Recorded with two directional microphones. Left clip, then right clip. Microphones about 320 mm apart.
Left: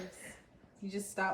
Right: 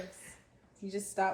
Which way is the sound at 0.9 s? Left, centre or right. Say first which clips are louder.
Right 3 dB; centre.